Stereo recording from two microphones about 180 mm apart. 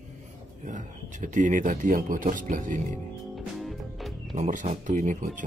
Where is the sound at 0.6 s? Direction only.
45° right (ahead or behind).